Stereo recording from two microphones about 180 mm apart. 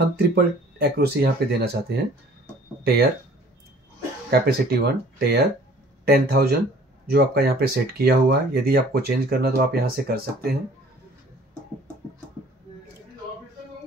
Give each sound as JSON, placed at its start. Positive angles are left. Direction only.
{"t": 0.0, "sound": "speech", "side_deg": -60}
{"t": 4.3, "sound": "speech", "side_deg": -60}